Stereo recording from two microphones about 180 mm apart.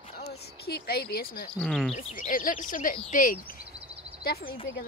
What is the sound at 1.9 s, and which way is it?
Speech, 40° left (ahead or behind).